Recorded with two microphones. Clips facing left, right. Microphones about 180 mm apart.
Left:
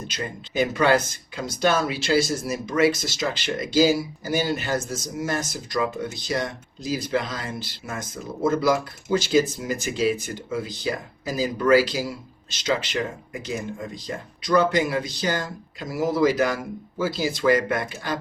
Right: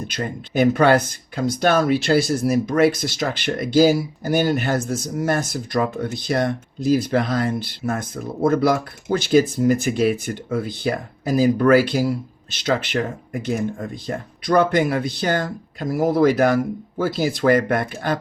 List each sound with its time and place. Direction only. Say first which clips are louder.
0.1 s speech: right 5 dB; 55° right (ahead or behind)